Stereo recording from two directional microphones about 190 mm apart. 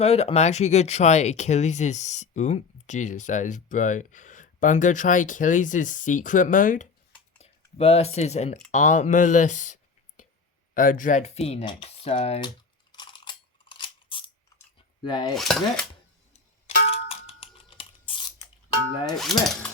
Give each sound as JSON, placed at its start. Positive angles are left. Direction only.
{"t": 0.0, "sound": "speech", "side_deg": 35}
{"t": 7.3, "sound": "speech", "side_deg": 35}
{"t": 12.9, "sound": "a sound", "side_deg": 25}
{"t": 15.0, "sound": "cutlery", "side_deg": 25}
{"t": 15.4, "sound": "dishes", "side_deg": 0}
{"t": 16.6, "sound": "clang", "side_deg": 30}
{"t": 19.1, "sound": "dishes", "side_deg": 0}